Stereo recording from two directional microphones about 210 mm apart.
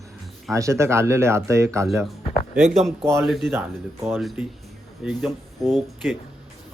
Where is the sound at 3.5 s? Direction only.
10° right (ahead or behind).